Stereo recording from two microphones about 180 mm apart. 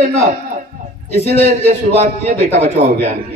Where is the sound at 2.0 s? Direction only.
40° right (ahead or behind).